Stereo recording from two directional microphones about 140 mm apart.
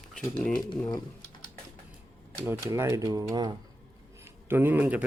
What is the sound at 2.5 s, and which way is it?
Speech, 20° right (ahead or behind).